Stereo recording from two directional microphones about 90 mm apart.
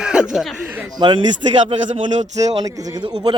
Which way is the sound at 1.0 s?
60° right (ahead or behind).